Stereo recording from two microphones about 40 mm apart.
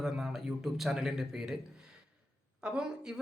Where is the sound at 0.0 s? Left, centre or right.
Centre.